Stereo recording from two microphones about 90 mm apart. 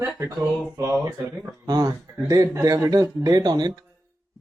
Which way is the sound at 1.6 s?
45° right (ahead or behind).